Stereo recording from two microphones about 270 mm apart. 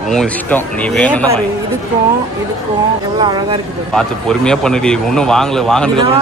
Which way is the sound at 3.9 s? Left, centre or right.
Centre.